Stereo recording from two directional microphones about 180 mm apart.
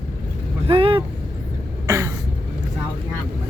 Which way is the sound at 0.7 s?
30° right (ahead or behind).